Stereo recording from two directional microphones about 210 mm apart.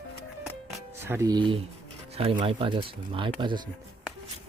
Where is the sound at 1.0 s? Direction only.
15° right (ahead or behind).